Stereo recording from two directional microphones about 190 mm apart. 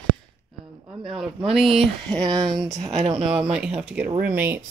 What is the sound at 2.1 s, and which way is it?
Speech, 20° right (ahead or behind).